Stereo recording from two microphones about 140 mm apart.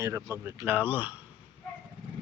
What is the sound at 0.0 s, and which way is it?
Speech, 20° right (ahead or behind).